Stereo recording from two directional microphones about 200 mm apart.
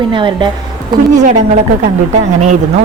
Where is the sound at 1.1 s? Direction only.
35° right (ahead or behind).